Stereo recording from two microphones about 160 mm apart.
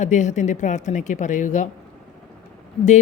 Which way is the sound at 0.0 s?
50° left (ahead or behind).